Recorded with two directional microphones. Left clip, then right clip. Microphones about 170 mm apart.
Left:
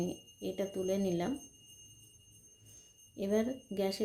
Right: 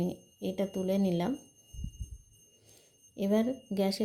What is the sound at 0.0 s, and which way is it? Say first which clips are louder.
Speech: right 3 dB; 30° right (ahead or behind).